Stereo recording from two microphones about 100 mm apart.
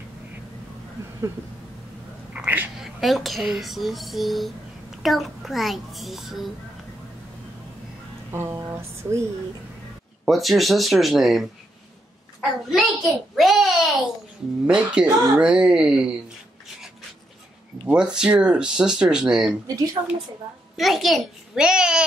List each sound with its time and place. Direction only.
2.3 s a sound: 20° right (ahead or behind)
2.8 s speech: centre (ahead or behind)
8.3 s speech: 25° right (ahead or behind)
10.2 s a child's voice: centre (ahead or behind)
17.8 s speech: 10° right (ahead or behind)
19.7 s a woman's voice: 40° right (ahead or behind)
20.7 s speech: centre (ahead or behind)